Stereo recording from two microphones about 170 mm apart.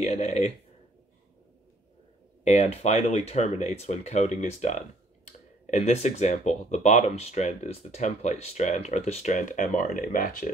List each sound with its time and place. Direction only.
0.0 s speech: 40° left (ahead or behind)
2.4 s speech: 40° left (ahead or behind); by 10.5 s 55° left (ahead or behind)